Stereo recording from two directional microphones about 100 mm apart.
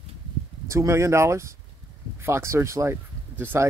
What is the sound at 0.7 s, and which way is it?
Speech, 30° right (ahead or behind).